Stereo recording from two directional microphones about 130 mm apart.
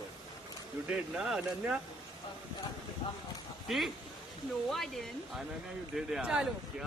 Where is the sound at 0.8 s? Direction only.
5° right (ahead or behind).